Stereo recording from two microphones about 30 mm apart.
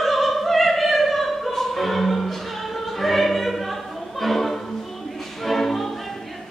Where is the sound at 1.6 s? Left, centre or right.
Centre.